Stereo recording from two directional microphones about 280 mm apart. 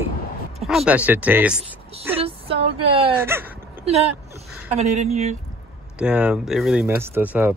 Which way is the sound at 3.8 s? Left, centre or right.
Right.